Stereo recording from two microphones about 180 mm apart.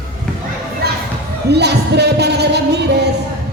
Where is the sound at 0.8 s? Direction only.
60° right (ahead or behind).